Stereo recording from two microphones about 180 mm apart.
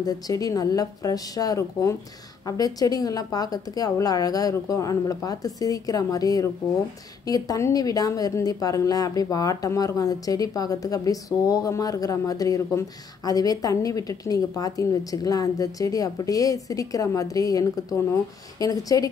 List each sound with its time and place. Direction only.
0.0 s speech: 20° left (ahead or behind)